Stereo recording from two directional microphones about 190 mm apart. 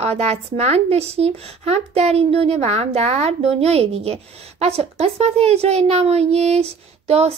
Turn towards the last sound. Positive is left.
turn(degrees=-35)  # may be behind; listen again after turning